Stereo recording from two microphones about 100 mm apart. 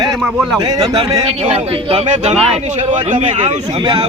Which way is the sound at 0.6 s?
40° right (ahead or behind).